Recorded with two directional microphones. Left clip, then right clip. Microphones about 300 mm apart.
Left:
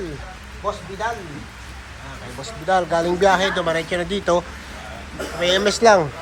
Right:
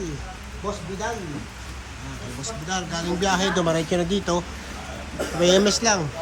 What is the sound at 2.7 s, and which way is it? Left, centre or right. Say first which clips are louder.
Speech: left 10 dB; centre.